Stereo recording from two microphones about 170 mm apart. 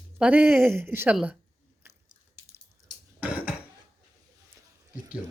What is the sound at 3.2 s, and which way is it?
Cough, 10° right (ahead or behind).